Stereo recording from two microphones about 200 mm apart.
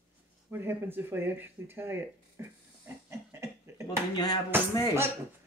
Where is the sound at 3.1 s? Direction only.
15° right (ahead or behind).